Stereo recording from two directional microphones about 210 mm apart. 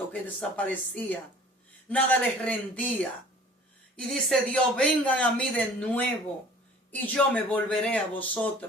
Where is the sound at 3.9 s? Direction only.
Centre (ahead or behind).